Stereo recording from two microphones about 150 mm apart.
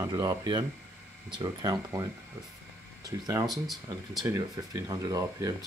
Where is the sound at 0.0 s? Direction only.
25° right (ahead or behind).